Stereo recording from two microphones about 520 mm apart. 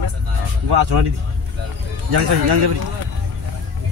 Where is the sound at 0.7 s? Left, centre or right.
Right.